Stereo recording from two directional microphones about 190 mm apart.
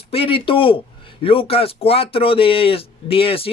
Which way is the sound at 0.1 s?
30° left (ahead or behind).